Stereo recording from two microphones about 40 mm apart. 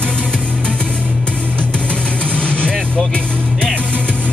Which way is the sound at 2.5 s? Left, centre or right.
Left.